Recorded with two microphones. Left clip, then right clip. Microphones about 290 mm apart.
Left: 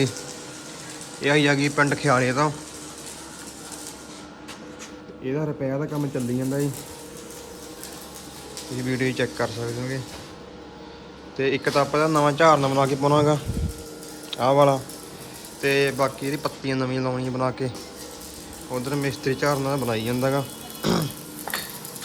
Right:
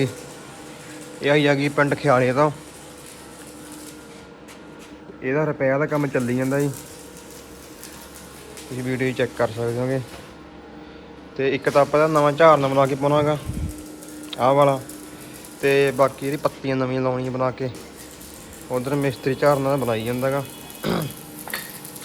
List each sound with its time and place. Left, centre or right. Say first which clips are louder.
1.2 s speech: right 2 dB; centre
5.2 s speech: right 6 dB; centre
8.8 s speech: right 2 dB; centre
11.3 s speech: right 3 dB; centre
18.7 s speech: right 4 dB; centre
20.8 s music: left 1 dB; centre